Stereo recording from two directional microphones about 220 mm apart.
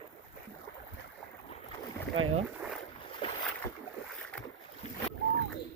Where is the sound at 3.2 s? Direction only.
25° left (ahead or behind).